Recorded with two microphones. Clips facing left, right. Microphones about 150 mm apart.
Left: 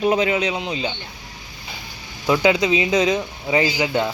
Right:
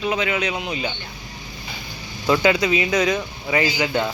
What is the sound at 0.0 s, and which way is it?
Speech, 40° left (ahead or behind).